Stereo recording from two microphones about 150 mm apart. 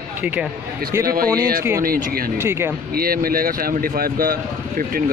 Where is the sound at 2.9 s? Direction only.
80° right.